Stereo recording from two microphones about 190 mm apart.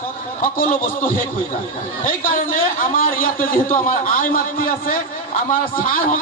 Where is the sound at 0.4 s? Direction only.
45° left (ahead or behind).